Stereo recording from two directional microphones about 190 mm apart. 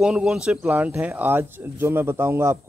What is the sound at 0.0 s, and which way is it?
Speech, 5° right (ahead or behind).